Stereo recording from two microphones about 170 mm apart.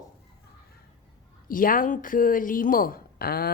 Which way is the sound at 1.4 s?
55° left (ahead or behind).